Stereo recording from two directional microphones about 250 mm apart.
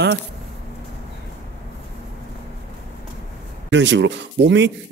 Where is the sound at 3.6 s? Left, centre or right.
Right.